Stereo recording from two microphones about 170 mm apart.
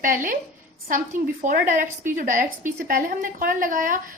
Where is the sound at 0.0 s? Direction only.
50° right (ahead or behind).